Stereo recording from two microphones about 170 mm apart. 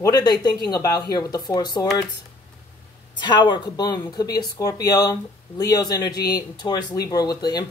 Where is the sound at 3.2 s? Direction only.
25° left (ahead or behind).